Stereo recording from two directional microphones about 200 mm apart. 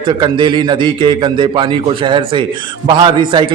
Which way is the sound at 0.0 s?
20° right (ahead or behind).